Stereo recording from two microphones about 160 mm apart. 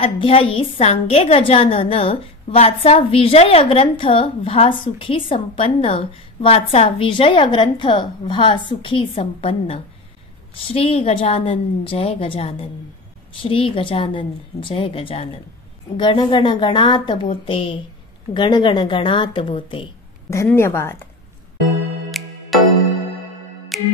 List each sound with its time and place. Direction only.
0.0 s a woman's voice: 35° left (ahead or behind)
20.2 s a woman's voice: 15° left (ahead or behind)
22.2 s music: centre (ahead or behind)
23.7 s music: centre (ahead or behind)